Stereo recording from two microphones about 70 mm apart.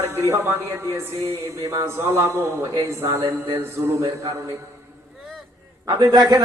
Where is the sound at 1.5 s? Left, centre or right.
Right.